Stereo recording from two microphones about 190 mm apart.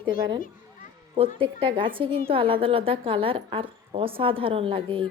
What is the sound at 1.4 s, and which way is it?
A woman's voice, 25° right (ahead or behind).